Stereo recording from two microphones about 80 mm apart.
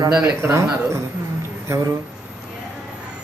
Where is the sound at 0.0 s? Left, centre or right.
Right.